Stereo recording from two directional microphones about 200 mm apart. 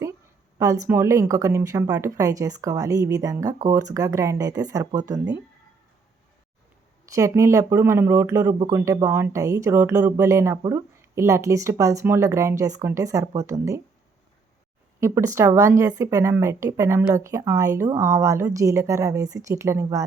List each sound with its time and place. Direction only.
0.6 s speech: 15° right (ahead or behind)
7.1 s speech: 15° right (ahead or behind)
15.3 s speech: 15° right (ahead or behind)